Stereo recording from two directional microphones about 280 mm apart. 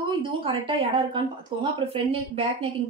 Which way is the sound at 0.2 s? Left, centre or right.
Centre.